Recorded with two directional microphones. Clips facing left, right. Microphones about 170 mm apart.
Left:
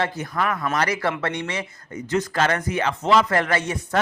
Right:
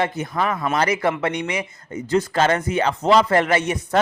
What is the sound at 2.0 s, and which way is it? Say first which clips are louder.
A man's voice: right 3 dB; 30° right (ahead or behind).